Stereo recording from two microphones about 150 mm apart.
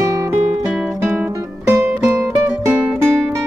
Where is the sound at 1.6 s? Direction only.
15° right (ahead or behind).